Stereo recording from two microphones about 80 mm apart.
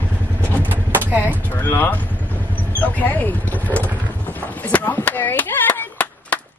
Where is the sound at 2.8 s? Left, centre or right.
Centre.